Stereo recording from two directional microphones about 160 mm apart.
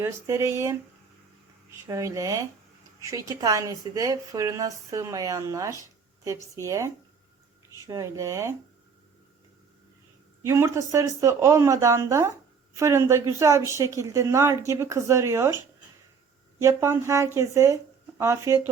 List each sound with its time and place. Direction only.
0.0 s speech: 15° right (ahead or behind)
1.9 s speech: 20° right (ahead or behind)
10.4 s speech: 20° right (ahead or behind)
16.6 s speech: 15° right (ahead or behind)